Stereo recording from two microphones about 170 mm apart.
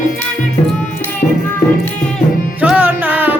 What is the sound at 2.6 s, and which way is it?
Music, 10° right (ahead or behind).